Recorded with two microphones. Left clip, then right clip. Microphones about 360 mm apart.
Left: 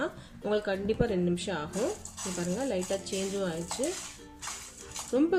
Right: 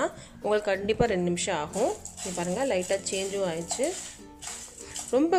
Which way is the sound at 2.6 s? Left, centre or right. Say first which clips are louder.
Right 5 dB; centre.